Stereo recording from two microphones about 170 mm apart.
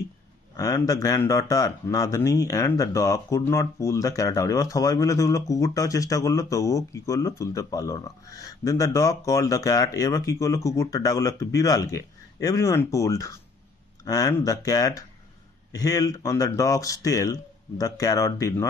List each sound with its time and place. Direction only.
0.6 s speech: 20° left (ahead or behind)